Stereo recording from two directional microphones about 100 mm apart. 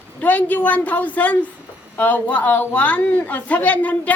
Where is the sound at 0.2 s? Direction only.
15° left (ahead or behind).